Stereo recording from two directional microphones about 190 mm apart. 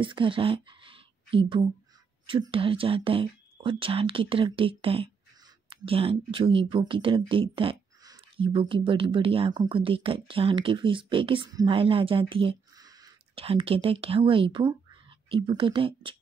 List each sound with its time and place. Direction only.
0.0 s speech: 25° right (ahead or behind)
13.4 s speech: 30° right (ahead or behind)